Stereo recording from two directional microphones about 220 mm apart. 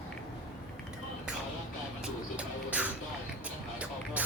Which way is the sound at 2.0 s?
5° right (ahead or behind).